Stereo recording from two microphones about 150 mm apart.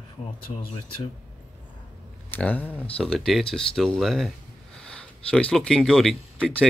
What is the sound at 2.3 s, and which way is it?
Speech, 10° left (ahead or behind).